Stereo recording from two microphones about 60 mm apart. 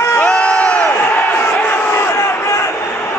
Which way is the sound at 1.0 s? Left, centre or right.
Left.